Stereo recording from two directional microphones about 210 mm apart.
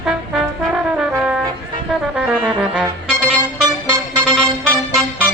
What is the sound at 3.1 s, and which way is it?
Music, 5° left (ahead or behind).